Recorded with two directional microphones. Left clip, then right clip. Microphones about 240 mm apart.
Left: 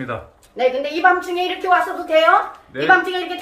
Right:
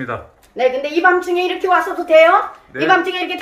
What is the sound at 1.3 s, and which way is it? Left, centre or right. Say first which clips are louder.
A woman's voice: right 2 dB; right.